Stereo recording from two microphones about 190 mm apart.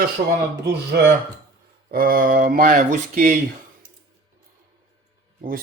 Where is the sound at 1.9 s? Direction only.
50° right (ahead or behind).